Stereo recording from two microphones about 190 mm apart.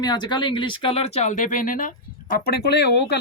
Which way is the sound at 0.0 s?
25° left (ahead or behind).